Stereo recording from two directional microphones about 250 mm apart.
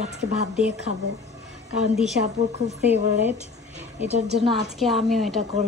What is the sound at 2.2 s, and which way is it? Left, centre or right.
Speech, right.